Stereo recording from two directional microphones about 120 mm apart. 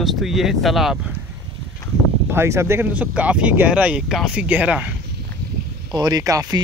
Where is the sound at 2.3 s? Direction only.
20° right (ahead or behind).